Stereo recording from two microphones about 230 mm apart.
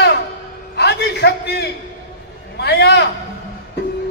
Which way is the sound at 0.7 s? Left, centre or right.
Left.